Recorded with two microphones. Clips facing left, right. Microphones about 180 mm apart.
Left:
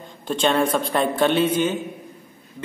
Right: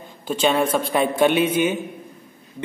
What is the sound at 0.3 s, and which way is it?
A man's voice, 5° right (ahead or behind).